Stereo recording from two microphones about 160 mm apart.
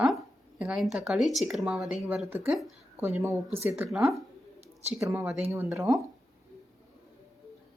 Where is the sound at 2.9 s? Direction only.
15° right (ahead or behind).